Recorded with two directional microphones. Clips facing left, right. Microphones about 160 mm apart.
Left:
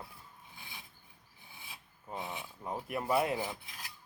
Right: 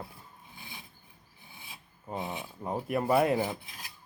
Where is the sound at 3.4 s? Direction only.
25° right (ahead or behind).